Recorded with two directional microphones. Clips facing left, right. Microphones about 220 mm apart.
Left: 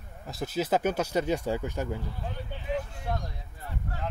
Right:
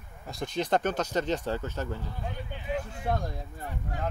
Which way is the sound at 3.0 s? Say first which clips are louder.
Right 4 dB; 55° right (ahead or behind).